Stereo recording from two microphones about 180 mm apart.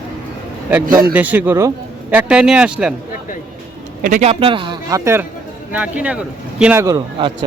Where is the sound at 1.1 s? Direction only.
10° right (ahead or behind).